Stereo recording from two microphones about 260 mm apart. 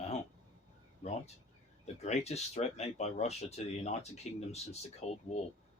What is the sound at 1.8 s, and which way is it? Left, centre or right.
Speech, left.